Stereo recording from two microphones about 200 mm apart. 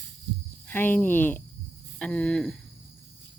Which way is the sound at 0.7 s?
10° left (ahead or behind).